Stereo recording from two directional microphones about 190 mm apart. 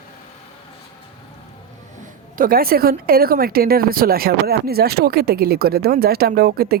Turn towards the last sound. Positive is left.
turn(degrees=-55)  # may be behind; listen again after turning